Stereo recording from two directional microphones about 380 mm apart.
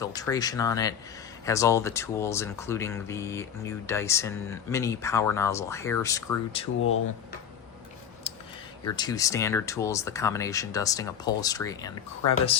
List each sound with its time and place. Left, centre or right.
0.0 s speech: centre
8.3 s a sound: centre
8.8 s speech: centre